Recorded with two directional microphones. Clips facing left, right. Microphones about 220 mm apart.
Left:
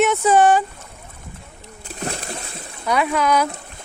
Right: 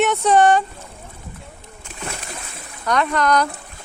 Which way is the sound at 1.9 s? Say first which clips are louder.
Left 4 dB; 35° left (ahead or behind).